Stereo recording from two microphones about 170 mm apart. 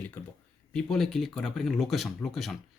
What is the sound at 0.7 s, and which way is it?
Speech, centre (ahead or behind).